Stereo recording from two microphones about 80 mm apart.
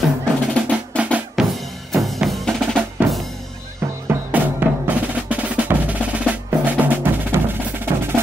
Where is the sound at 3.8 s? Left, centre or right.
Right.